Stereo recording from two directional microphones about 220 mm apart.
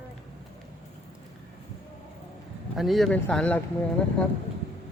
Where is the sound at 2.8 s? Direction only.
Centre (ahead or behind).